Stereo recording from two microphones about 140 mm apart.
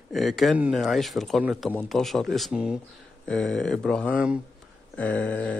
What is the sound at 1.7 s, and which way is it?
A man's voice, 5° left (ahead or behind).